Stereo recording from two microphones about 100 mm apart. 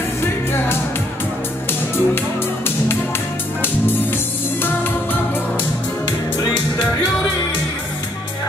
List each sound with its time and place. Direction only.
0.5 s music: 20° left (ahead or behind)
4.6 s music: 20° left (ahead or behind)